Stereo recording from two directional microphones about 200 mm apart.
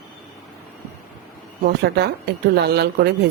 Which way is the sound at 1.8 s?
55° right (ahead or behind).